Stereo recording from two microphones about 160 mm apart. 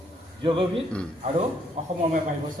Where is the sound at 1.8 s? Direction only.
45° right (ahead or behind).